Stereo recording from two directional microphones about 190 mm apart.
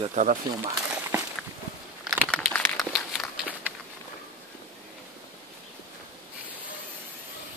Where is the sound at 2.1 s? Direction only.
5° left (ahead or behind).